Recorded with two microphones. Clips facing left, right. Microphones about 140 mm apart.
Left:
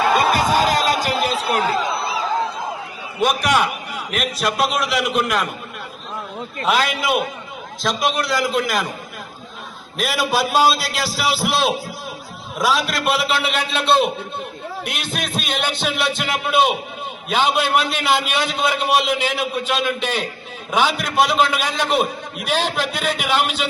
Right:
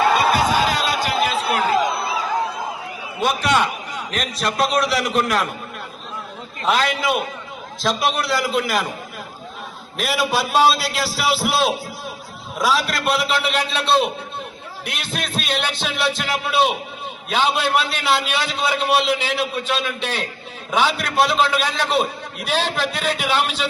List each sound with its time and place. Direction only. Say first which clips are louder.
0.2 s a sound: left 1 dB; 45° left (ahead or behind)
3.2 s a man's voice: left 1 dB; 15° left (ahead or behind)
6.7 s a man's voice: even; 5° left (ahead or behind)
10.0 s a man's voice: left 1 dB; centre (ahead or behind)